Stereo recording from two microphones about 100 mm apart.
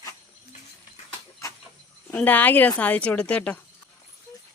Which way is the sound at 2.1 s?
15° left (ahead or behind).